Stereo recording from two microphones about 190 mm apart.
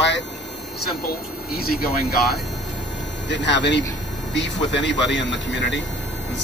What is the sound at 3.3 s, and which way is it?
Speech, 65° left (ahead or behind).